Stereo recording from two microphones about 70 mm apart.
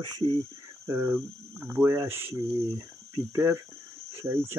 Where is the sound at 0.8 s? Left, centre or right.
Right.